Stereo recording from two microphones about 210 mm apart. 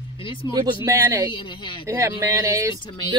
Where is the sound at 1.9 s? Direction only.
15° right (ahead or behind).